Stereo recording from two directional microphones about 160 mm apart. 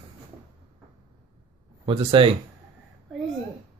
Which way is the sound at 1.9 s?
35° right (ahead or behind).